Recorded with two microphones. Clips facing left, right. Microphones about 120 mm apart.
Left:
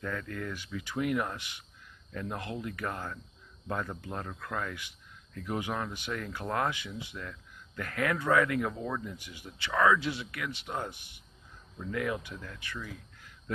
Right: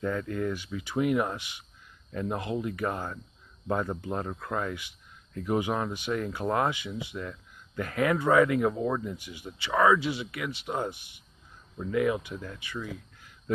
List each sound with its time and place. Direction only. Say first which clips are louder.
0.0 s speech: right 7 dB; 20° right (ahead or behind)
9.9 s speech: right 3 dB; 10° right (ahead or behind)